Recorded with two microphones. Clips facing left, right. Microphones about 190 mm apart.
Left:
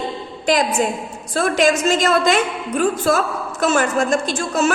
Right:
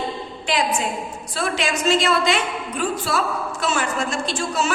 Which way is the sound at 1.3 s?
45° left (ahead or behind).